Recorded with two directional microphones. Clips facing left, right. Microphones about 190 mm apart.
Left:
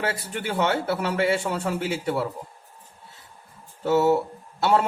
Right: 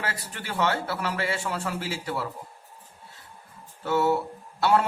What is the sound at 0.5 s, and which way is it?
A man's voice, 25° left (ahead or behind).